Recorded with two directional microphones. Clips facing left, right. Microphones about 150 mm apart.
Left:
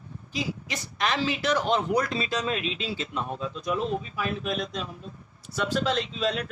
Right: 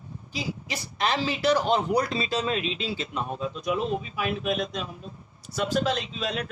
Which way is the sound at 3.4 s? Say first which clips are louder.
Right 2 dB; 15° right (ahead or behind).